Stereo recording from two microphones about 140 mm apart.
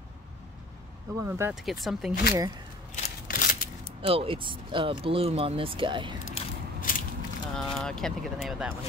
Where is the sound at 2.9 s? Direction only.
80° left.